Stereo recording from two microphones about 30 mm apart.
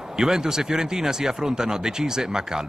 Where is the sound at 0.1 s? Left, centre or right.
Right.